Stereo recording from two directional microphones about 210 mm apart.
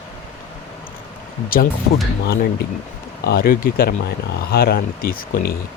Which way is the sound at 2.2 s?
50° left (ahead or behind).